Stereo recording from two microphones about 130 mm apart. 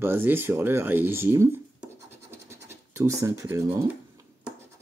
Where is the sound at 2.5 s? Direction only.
20° right (ahead or behind).